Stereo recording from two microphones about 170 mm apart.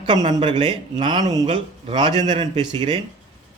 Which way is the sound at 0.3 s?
25° right (ahead or behind).